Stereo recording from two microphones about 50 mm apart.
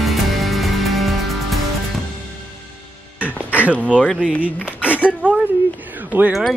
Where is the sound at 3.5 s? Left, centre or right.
Right.